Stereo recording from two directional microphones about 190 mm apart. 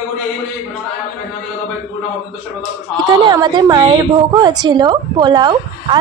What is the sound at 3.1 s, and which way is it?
A woman's voice, 20° right (ahead or behind).